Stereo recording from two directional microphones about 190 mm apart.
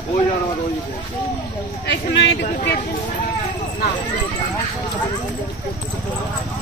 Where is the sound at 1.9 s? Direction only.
65° left (ahead or behind).